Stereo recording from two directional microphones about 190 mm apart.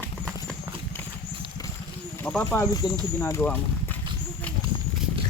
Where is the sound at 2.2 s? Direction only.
10° left (ahead or behind).